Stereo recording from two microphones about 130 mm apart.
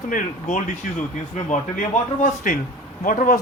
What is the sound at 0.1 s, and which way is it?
Speech, 75° left (ahead or behind).